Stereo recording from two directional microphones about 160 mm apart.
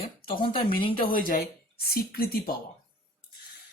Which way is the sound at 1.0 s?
65° left (ahead or behind).